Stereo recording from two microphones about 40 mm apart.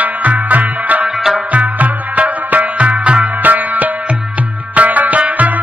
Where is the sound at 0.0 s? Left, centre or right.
Right.